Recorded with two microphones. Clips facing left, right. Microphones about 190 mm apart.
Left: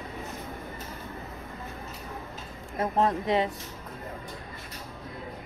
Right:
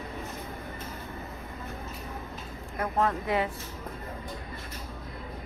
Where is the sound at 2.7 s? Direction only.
25° left (ahead or behind).